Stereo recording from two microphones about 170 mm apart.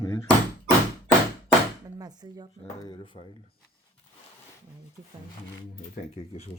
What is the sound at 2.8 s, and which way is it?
Speech, 30° left (ahead or behind).